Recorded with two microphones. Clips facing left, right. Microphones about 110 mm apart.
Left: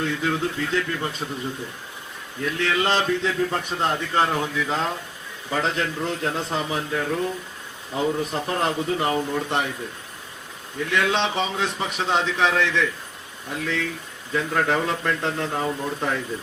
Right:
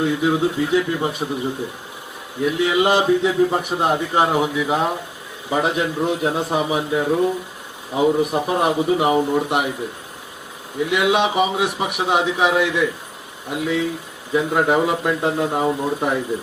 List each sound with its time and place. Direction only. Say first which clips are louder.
0.0 s a man's voice: right 6 dB; 15° right (ahead or behind)
2.4 s a man's voice: right 6 dB; 15° right (ahead or behind)
10.8 s a man's voice: right 5 dB; 15° right (ahead or behind)